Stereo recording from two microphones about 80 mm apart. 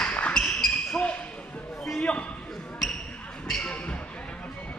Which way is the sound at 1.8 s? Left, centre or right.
Centre.